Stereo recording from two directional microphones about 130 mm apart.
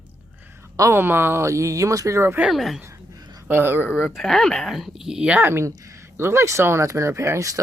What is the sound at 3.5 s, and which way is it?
Speech, 15° right (ahead or behind).